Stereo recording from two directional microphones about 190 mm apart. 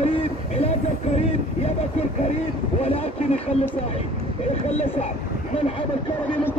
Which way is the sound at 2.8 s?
30° left (ahead or behind).